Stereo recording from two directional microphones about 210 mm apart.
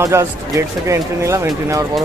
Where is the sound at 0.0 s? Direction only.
15° right (ahead or behind).